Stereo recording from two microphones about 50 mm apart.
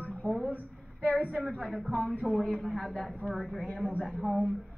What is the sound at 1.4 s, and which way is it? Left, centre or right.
A woman's voice, centre.